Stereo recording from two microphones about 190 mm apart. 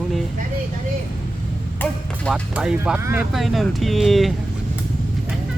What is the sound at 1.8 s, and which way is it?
Music, 10° left (ahead or behind).